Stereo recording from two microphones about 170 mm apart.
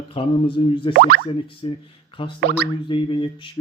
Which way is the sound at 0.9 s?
70° right (ahead or behind).